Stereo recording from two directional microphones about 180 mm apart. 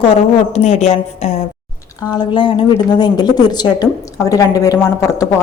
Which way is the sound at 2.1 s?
25° left (ahead or behind).